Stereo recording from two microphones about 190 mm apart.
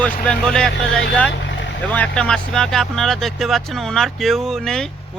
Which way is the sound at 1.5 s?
70° left (ahead or behind).